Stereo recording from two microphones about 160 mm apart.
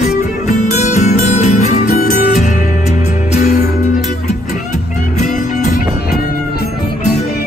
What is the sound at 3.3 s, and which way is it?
Music, 45° left (ahead or behind).